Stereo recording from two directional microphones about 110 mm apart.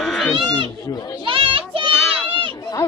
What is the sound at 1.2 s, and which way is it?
Children playing, 55° right (ahead or behind).